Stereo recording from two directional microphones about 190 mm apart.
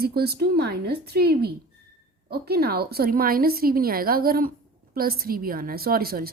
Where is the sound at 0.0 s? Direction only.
55° right (ahead or behind).